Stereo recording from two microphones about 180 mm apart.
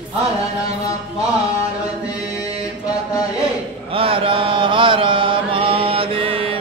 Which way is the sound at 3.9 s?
30° right (ahead or behind).